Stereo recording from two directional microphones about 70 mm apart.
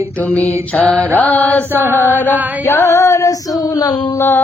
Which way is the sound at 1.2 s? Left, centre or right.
Left.